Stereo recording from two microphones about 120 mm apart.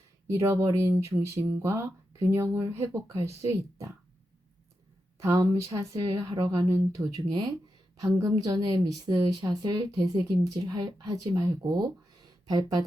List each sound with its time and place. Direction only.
0.3 s speech: 25° right (ahead or behind)
5.2 s a woman's voice: 25° right (ahead or behind)